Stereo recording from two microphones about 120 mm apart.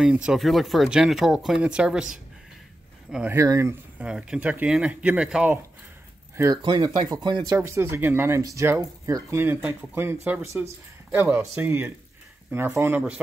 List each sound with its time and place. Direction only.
0.0 s speech: 5° right (ahead or behind)
3.3 s speech: 25° right (ahead or behind)
4.0 s speech: 10° right (ahead or behind)
6.3 s speech: 25° right (ahead or behind)
6.6 s speech: 40° right (ahead or behind)
7.4 s speech: 25° right (ahead or behind)